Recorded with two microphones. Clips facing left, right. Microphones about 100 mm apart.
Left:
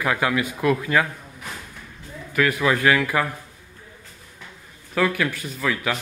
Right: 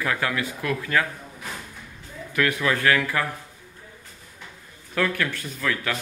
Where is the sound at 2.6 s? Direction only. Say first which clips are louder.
Left 3 dB; 15° left (ahead or behind).